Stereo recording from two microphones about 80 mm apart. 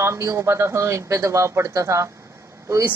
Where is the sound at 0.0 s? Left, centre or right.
Right.